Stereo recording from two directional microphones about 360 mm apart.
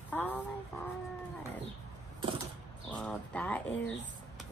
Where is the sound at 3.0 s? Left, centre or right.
Centre.